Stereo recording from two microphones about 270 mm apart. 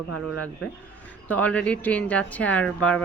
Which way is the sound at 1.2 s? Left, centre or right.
Centre.